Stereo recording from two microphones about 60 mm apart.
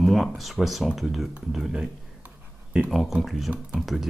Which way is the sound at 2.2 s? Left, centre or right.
Right.